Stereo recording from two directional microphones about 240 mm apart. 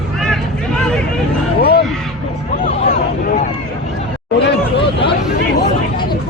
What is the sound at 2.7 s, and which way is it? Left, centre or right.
Vehicle, left.